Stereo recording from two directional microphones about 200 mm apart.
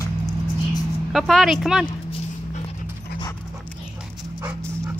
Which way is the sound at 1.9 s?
25° left (ahead or behind).